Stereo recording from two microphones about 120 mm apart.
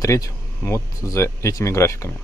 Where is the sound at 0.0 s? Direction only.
25° left (ahead or behind).